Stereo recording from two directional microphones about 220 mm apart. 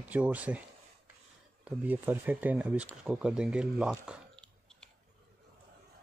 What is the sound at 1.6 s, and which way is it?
Speech, 5° right (ahead or behind).